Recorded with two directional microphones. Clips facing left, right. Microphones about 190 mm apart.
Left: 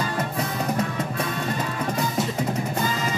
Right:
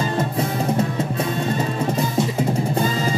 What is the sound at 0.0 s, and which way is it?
Music, 25° right (ahead or behind).